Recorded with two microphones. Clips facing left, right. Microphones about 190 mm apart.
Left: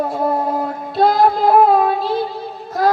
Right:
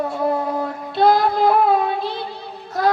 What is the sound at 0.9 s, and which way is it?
Child singing, 45° left (ahead or behind).